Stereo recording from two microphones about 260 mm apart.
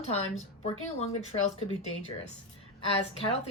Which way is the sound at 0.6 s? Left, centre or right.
Left.